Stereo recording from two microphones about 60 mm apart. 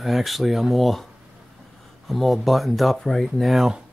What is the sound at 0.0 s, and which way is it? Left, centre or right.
Speech, centre.